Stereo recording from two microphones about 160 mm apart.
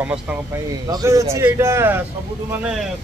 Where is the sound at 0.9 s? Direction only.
20° right (ahead or behind).